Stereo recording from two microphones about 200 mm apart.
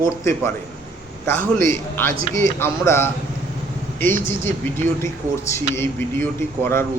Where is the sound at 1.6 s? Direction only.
10° left (ahead or behind).